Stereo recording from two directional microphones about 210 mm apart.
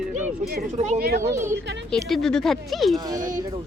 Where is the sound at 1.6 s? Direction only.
55° right (ahead or behind).